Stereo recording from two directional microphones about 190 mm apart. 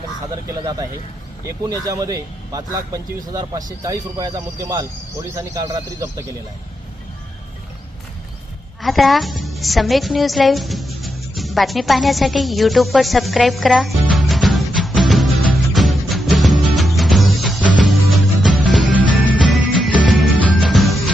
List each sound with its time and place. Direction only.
0.6 s speech: 20° right (ahead or behind)
8.8 s a woman's voice: centre (ahead or behind)
15.7 s music: centre (ahead or behind)